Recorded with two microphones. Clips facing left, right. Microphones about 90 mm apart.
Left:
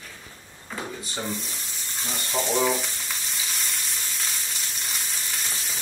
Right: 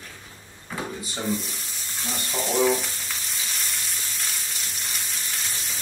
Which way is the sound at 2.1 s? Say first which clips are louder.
Left 1 dB; centre (ahead or behind).